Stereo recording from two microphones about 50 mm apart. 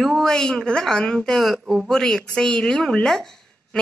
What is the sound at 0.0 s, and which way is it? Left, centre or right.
A woman's voice, centre.